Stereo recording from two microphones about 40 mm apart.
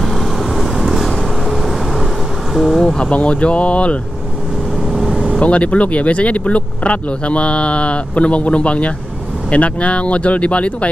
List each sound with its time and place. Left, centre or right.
0.0 s vehicle: centre
3.0 s speech: left
4.9 s vehicle: centre
5.4 s speech: left